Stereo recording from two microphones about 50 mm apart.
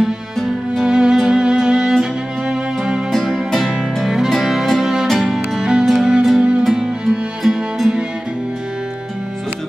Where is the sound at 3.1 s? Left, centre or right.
Centre.